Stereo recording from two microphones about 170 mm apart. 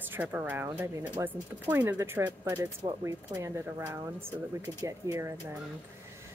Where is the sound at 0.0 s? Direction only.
10° right (ahead or behind).